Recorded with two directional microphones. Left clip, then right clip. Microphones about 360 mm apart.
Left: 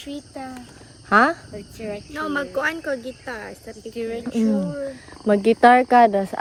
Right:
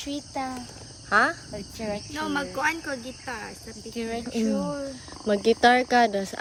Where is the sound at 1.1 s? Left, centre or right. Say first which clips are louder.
Left 5 dB; centre.